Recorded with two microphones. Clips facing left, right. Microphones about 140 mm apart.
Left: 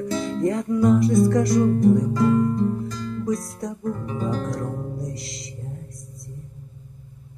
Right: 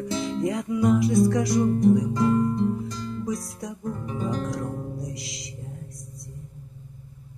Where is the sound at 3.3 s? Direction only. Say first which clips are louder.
Left 4 dB; centre (ahead or behind).